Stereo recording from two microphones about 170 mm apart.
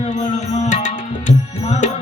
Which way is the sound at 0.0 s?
45° left (ahead or behind).